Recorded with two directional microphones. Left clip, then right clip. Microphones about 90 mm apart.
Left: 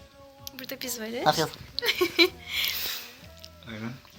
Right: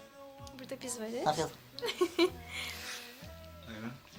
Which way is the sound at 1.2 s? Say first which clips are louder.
Left 8 dB; 30° left (ahead or behind).